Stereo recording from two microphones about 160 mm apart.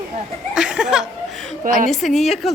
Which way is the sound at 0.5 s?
5° right (ahead or behind).